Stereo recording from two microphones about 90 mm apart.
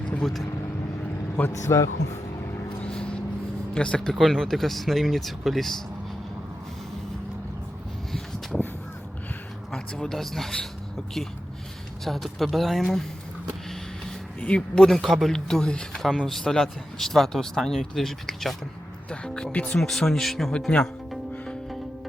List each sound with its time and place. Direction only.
0.0 s vehicle: 10° left (ahead or behind)
1.4 s a man's voice: 30° left (ahead or behind)
2.8 s vehicle: 10° left (ahead or behind)
3.8 s speech: 10° left (ahead or behind)
8.1 s a sound: 5° left (ahead or behind)
9.7 s speech: 5° left (ahead or behind)
12.0 s speech: centre (ahead or behind)
14.4 s speech: 15° left (ahead or behind)
14.8 s speech: centre (ahead or behind)